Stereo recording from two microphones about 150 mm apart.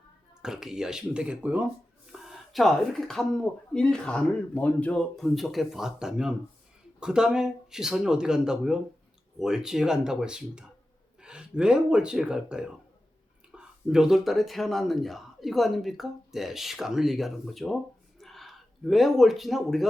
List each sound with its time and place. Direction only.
0.4 s speech: 5° right (ahead or behind)